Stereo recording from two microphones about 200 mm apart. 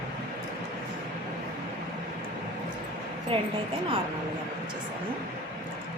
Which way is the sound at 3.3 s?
25° right (ahead or behind).